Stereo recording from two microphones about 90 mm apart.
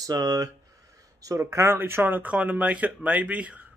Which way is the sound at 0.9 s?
40° right (ahead or behind).